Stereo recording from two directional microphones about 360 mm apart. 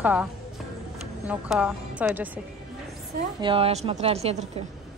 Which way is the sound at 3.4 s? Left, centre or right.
Centre.